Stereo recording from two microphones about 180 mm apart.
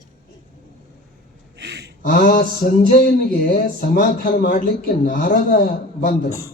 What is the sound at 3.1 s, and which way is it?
Speech, 55° left (ahead or behind).